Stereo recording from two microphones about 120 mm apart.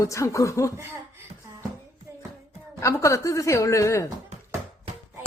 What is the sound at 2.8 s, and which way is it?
Speech, 25° left (ahead or behind).